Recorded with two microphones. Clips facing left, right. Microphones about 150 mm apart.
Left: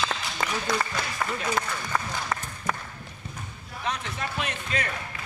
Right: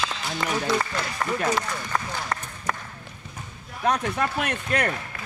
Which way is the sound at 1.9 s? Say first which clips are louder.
Even; 5° left (ahead or behind).